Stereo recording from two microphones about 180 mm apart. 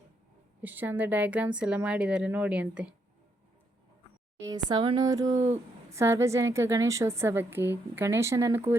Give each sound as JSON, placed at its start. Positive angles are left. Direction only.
{"t": 0.6, "sound": "a woman's voice", "side_deg": -10}
{"t": 4.4, "sound": "a woman's voice", "side_deg": -20}